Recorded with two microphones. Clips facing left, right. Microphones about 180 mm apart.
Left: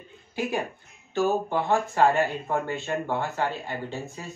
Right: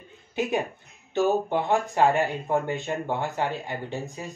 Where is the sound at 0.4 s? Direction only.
20° right (ahead or behind).